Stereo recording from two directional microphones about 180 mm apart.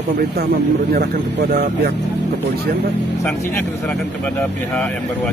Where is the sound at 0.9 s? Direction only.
60° right (ahead or behind).